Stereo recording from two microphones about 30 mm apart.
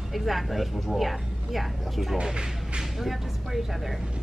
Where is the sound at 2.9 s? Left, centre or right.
Centre.